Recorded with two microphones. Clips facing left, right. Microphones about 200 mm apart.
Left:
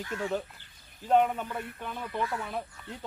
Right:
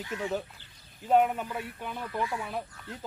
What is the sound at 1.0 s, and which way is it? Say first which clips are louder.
Speech: even; 5° right (ahead or behind).